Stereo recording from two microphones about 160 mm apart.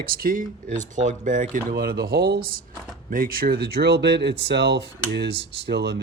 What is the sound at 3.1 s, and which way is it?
Speech, 65° right (ahead or behind).